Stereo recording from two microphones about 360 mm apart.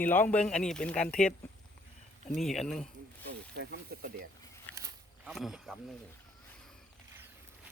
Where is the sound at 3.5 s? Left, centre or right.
Right.